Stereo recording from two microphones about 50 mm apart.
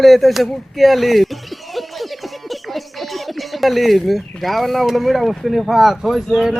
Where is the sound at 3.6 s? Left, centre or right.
Centre.